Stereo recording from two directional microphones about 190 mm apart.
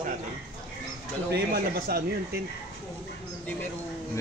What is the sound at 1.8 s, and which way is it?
Speech, 55° right (ahead or behind).